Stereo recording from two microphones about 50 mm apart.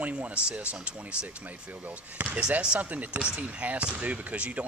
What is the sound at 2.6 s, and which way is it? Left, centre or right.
Speech, centre.